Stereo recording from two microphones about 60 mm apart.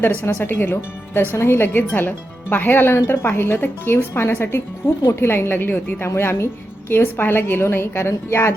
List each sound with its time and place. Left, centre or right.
0.0 s speech: left
0.3 s a woman's voice: left
4.8 s speech: left
5.3 s a woman's voice: left